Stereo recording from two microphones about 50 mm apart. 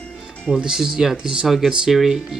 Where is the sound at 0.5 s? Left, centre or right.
Centre.